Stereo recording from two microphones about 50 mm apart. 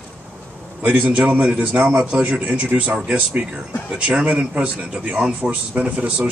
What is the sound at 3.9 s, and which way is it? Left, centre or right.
A man's voice, centre.